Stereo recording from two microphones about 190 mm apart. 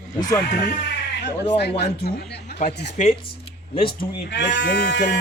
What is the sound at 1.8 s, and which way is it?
Speech, 60° left (ahead or behind).